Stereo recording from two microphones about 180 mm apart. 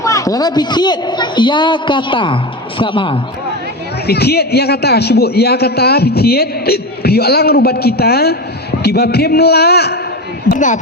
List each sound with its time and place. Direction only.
0.0 s a woman's voice: 20° left (ahead or behind)
4.0 s a man's voice: 65° left (ahead or behind)
10.5 s speech: 45° left (ahead or behind)